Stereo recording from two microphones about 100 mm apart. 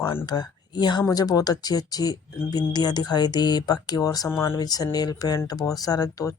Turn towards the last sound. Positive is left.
turn(degrees=35)  # may be behind; listen again after turning